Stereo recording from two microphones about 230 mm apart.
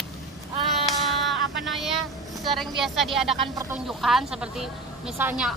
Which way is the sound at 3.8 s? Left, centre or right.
Centre.